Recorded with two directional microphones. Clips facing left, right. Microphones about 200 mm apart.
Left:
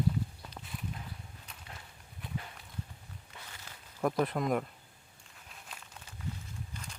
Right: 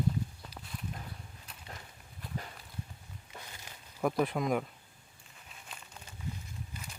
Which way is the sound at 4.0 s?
5° right (ahead or behind).